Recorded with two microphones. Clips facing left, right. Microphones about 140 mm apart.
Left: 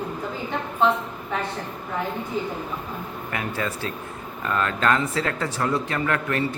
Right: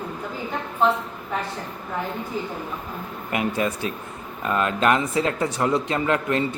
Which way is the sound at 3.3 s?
20° right (ahead or behind).